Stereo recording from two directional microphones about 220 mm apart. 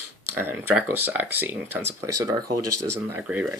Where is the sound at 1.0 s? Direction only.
10° right (ahead or behind).